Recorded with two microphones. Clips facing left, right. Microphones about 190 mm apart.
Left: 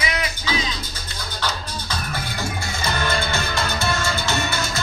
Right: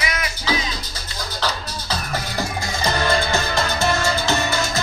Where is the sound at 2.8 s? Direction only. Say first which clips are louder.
Right 4 dB; 40° right (ahead or behind).